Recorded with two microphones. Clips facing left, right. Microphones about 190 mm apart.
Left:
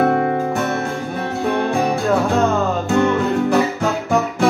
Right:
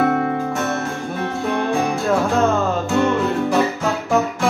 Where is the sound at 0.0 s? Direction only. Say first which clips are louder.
Left 2 dB; 40° left (ahead or behind).